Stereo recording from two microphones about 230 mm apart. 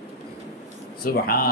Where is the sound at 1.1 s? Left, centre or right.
Left.